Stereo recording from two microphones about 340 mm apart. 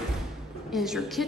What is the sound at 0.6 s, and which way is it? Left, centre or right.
Speech, centre.